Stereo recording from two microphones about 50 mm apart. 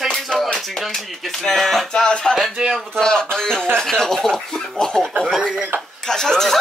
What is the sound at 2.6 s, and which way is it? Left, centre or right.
Speech, centre.